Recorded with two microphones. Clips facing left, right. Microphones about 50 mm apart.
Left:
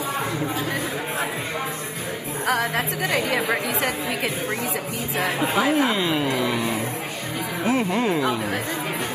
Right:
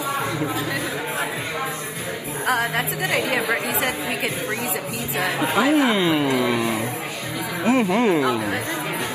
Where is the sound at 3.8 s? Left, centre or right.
Right.